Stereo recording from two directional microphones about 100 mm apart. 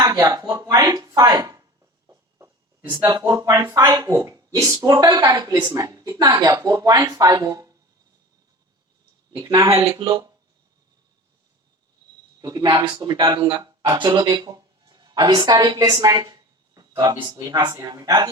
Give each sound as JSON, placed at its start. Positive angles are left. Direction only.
{"t": 0.0, "sound": "a sound", "side_deg": -35}
{"t": 2.9, "sound": "speech", "side_deg": -40}
{"t": 9.6, "sound": "speech", "side_deg": -30}
{"t": 12.4, "sound": "a woman's voice", "side_deg": -40}